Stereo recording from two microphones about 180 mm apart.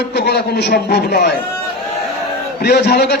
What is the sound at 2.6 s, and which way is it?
Speech, 65° left (ahead or behind).